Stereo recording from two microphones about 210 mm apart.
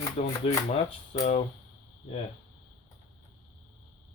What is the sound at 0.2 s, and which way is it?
Speech, 30° left (ahead or behind).